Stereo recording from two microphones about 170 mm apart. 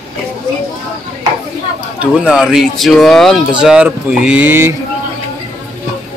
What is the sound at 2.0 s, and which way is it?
Speech, 5° right (ahead or behind).